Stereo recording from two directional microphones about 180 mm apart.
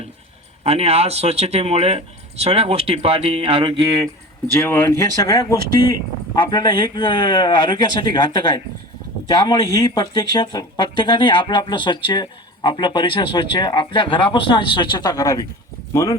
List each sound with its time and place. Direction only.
0.6 s speech: 35° right (ahead or behind)
4.6 s speech: 15° left (ahead or behind)